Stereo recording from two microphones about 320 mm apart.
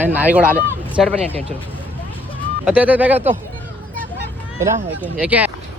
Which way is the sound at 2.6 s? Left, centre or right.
Centre.